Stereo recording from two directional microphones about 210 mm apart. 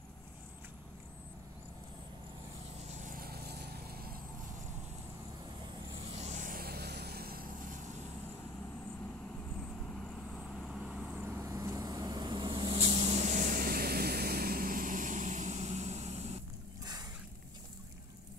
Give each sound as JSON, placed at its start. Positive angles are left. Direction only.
{"t": 2.8, "sound": "vehicle", "side_deg": -35}
{"t": 6.1, "sound": "vehicle", "side_deg": -35}
{"t": 10.3, "sound": "vehicle", "side_deg": 0}
{"t": 16.8, "sound": "a sound", "side_deg": -20}